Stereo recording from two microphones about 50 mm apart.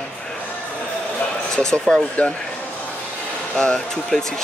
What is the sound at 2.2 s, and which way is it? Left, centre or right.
Speech, left.